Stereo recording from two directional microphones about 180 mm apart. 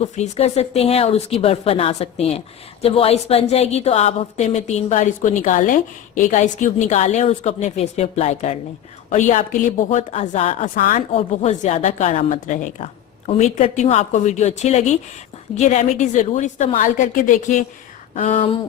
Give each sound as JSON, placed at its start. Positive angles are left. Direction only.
{"t": 0.2, "sound": "a woman's voice", "side_deg": 35}